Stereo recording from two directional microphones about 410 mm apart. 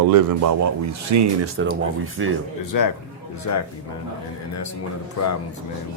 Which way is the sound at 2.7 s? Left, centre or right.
Left.